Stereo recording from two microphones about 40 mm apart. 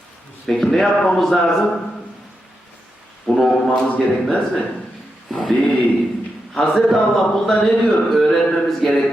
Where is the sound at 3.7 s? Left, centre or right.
Left.